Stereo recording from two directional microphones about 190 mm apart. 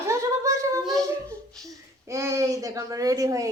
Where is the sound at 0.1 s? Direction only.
15° right (ahead or behind).